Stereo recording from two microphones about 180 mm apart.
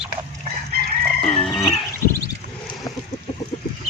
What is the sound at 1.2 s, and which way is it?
Music, 35° left (ahead or behind).